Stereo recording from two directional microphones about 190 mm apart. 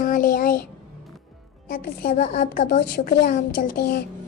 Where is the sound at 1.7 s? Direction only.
50° left (ahead or behind).